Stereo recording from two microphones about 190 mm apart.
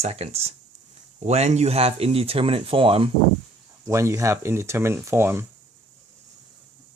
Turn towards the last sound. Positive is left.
turn(degrees=-15)  # may be behind; listen again after turning